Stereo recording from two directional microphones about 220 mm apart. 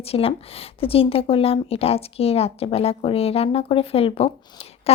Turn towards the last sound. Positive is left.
turn(degrees=25)  # may be behind; listen again after turning